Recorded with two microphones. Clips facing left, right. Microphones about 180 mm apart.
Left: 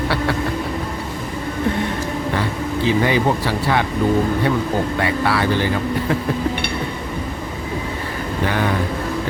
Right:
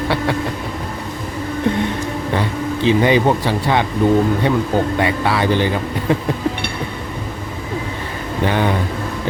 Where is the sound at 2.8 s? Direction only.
20° right (ahead or behind).